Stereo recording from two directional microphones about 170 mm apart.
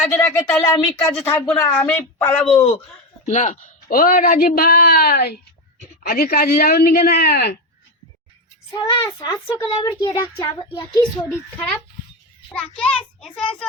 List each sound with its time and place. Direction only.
0.1 s speech: 20° left (ahead or behind)
3.2 s a man's voice: 45° left (ahead or behind); by 7.6 s 65° left (ahead or behind)
8.7 s a child's voice: 20° left (ahead or behind)
11.5 s a child's voice: 10° left (ahead or behind)